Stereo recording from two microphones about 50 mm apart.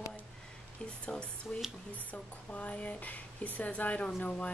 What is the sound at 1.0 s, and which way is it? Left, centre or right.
Speech, left.